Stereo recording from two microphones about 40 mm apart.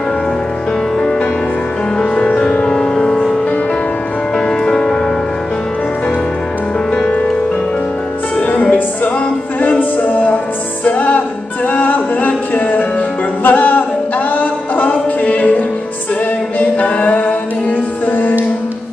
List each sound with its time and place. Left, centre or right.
2.3 s music: left
4.5 s music: left
6.9 s music: centre
8.5 s music: left
9.6 s music: left
13.4 s a capella: left
16.5 s music: left